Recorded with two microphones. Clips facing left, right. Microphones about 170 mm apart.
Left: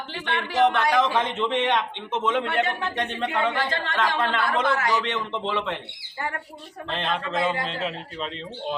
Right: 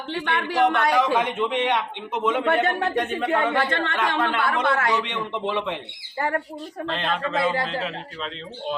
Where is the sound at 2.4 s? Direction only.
50° right (ahead or behind).